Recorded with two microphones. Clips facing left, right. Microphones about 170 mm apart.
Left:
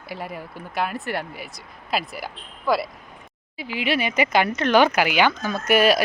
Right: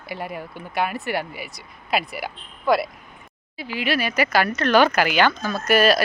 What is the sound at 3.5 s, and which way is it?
Speech, 15° left (ahead or behind).